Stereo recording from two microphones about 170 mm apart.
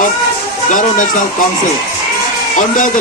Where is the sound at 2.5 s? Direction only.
50° left (ahead or behind).